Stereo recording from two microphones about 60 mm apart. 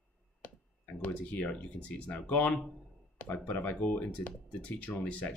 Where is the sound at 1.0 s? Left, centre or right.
Left.